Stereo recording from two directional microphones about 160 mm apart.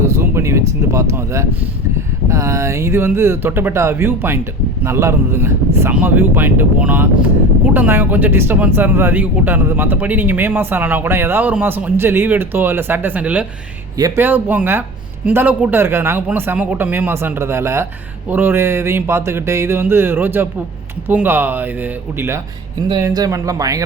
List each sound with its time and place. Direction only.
0.0 s speech: 15° right (ahead or behind)
22.9 s speech: 20° right (ahead or behind)